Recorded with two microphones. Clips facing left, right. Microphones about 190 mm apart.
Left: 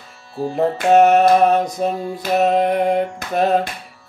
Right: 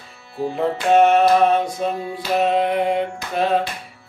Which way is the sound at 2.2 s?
45° left (ahead or behind).